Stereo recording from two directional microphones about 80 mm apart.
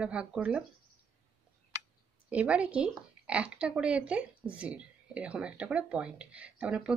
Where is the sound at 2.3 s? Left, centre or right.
Centre.